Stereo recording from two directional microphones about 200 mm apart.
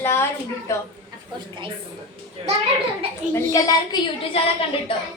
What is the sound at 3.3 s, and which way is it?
Speech, 15° left (ahead or behind).